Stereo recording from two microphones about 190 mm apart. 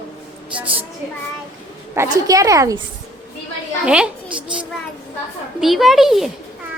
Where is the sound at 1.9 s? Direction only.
15° right (ahead or behind).